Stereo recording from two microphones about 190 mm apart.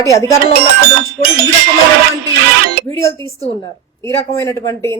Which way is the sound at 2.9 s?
15° left (ahead or behind).